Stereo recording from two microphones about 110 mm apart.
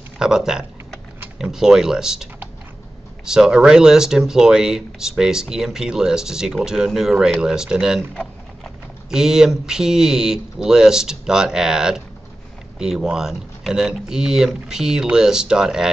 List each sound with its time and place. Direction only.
0.2 s speech: 5° right (ahead or behind)
8.1 s a sound: 5° left (ahead or behind)
9.1 s speech: 5° right (ahead or behind)